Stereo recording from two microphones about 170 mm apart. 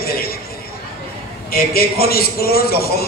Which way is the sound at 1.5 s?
65° left (ahead or behind).